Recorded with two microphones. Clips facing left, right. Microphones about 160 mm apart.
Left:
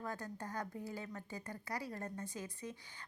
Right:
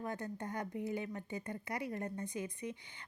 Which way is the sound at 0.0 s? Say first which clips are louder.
Right 3 dB; 20° right (ahead or behind).